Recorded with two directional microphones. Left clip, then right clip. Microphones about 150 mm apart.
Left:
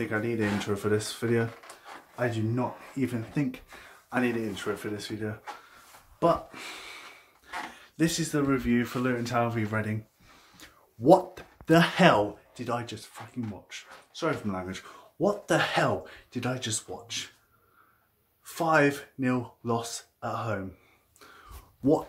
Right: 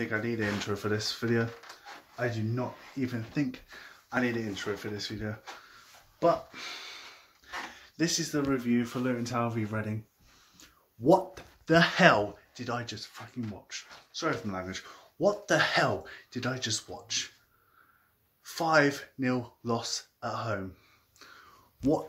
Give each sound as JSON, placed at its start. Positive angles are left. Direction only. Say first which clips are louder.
{"t": 0.0, "sound": "speech", "louder": "left 2 dB", "side_deg": 5}
{"t": 2.1, "sound": "speech", "louder": "left 3 dB", "side_deg": 20}
{"t": 6.1, "sound": "speech", "louder": "left 1 dB", "side_deg": 15}
{"t": 7.4, "sound": "speech", "louder": "left 2 dB", "side_deg": 0}
{"t": 11.1, "sound": "speech", "louder": "left 4 dB", "side_deg": 5}
{"t": 18.4, "sound": "speech", "louder": "left 1 dB", "side_deg": 0}